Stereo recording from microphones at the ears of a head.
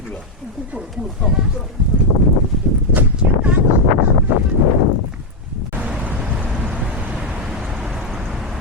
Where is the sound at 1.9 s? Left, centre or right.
Left.